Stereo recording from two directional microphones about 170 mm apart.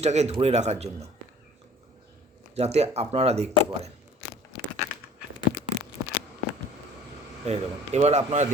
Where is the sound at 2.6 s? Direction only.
40° right (ahead or behind).